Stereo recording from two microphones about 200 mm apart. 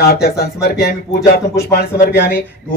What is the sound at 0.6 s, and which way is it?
A man's voice, 50° left (ahead or behind).